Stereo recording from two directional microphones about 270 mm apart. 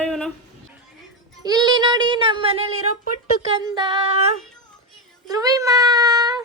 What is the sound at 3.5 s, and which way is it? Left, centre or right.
Child singing, centre.